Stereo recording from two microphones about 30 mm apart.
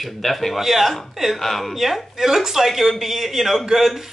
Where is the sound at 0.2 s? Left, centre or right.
Centre.